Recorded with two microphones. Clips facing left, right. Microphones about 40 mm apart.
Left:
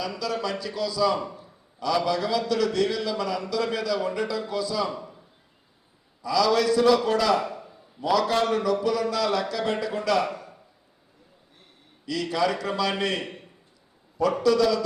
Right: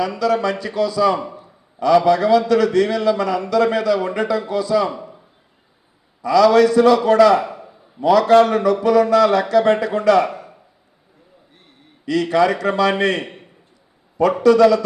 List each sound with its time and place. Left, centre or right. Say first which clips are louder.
0.0 s speech: right 10 dB; right
1.2 s a man's voice: right 4 dB; right
1.8 s speech: right 11 dB; right
4.9 s a sound: right 5 dB; right
6.2 s speech: right 9 dB; right
7.4 s a sound: right 4 dB; right
8.0 s a man's voice: right 10 dB; centre
8.4 s speech: right 7 dB; right
10.2 s a sound: right 5 dB; right
12.0 s speech: right 9 dB; right